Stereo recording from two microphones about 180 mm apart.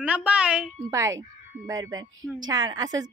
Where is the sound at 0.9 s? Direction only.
15° right (ahead or behind).